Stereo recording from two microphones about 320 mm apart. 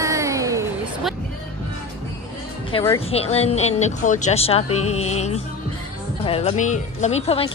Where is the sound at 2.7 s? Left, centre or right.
Centre.